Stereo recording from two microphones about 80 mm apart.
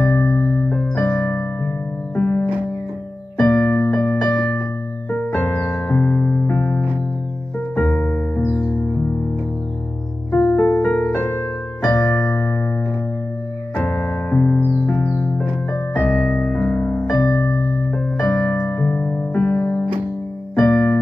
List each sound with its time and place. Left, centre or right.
0.0 s electric piano: centre
2.1 s music: centre
3.3 s electric piano: centre; by 6.9 s left
7.7 s piano: centre
8.4 s music: centre
10.3 s music: left
10.9 s piano: centre
11.1 s piano: left
11.8 s electric piano: centre
13.7 s electric piano: left
15.0 s music: left
18.1 s music: centre
18.7 s piano: centre
20.5 s electric piano: centre